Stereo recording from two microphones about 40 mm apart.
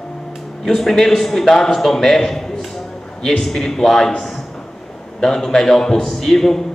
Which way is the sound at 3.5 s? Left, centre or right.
Centre.